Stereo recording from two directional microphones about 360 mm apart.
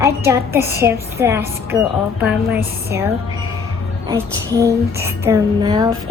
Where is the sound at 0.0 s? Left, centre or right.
Centre.